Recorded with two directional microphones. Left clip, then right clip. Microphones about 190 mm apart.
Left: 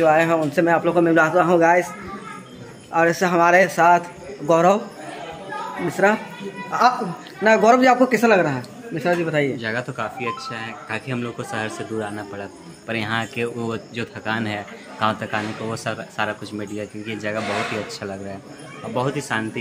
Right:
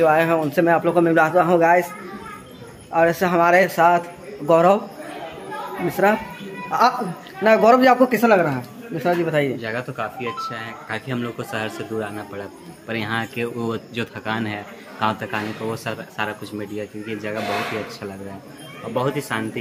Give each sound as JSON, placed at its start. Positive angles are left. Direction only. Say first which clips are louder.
{"t": 0.0, "sound": "a man's voice", "louder": "even", "side_deg": -10}
{"t": 2.9, "sound": "a man's voice", "louder": "even", "side_deg": -5}
{"t": 5.9, "sound": "a man's voice", "louder": "even", "side_deg": -10}
{"t": 6.7, "sound": "a woman's voice", "louder": "even", "side_deg": -25}
{"t": 9.6, "sound": "speech", "louder": "left 1 dB", "side_deg": 10}
{"t": 14.4, "sound": "a man's voice", "louder": "left 1 dB", "side_deg": 5}
{"t": 18.9, "sound": "speech", "louder": "even", "side_deg": -5}